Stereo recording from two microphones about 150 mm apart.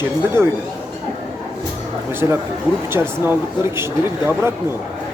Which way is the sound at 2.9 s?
15° right (ahead or behind).